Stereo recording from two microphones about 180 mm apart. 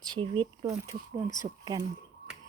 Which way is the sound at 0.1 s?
25° right (ahead or behind).